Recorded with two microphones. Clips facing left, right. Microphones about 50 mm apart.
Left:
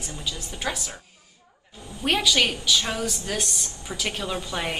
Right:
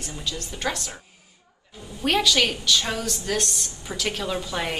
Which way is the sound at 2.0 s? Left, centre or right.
Centre.